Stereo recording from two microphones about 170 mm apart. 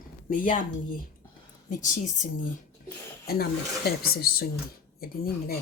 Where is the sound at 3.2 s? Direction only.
65° left (ahead or behind).